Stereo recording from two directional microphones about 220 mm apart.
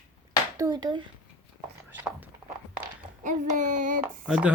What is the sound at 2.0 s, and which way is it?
Speech, 10° right (ahead or behind).